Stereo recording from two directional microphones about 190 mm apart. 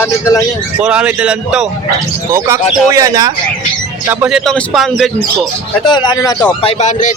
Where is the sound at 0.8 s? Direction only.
5° right (ahead or behind).